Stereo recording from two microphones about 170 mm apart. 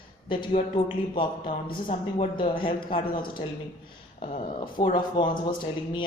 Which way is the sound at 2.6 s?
30° left (ahead or behind).